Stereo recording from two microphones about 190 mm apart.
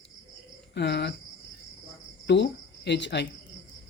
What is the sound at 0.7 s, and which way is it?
Speech, 60° left (ahead or behind).